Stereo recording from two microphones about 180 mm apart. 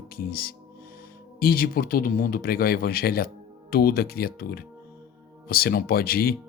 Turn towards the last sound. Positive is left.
turn(degrees=55)  # may be behind; listen again after turning